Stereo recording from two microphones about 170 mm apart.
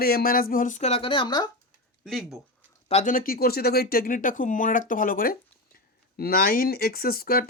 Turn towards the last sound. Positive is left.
turn(degrees=60)  # may be behind; listen again after turning